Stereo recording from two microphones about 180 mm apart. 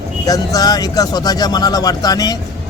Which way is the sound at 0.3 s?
20° left (ahead or behind).